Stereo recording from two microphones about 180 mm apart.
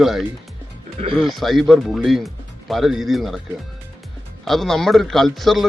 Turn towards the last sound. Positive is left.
turn(degrees=0)  # may be behind; listen again after turning